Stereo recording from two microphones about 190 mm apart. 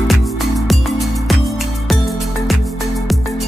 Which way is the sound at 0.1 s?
Centre (ahead or behind).